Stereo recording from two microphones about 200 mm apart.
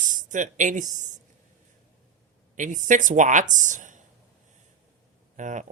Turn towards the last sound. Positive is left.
turn(degrees=-40)  # may be behind; listen again after turning